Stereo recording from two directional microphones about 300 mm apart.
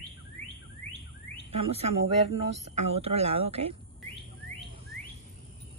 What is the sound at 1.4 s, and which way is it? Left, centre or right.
Speech, right.